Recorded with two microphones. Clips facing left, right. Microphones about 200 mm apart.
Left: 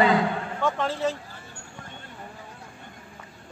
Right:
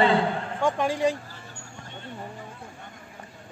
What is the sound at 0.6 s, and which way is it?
Speech, 15° right (ahead or behind).